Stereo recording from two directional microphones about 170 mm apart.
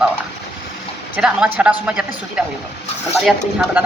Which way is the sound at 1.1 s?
10° right (ahead or behind).